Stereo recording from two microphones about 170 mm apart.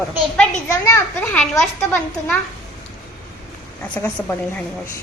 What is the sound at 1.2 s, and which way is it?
Speech, 10° left (ahead or behind).